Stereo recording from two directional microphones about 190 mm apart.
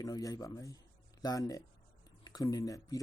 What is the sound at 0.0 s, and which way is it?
Speech, 20° left (ahead or behind).